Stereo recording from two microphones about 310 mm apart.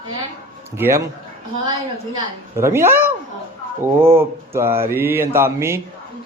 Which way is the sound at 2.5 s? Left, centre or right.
Centre.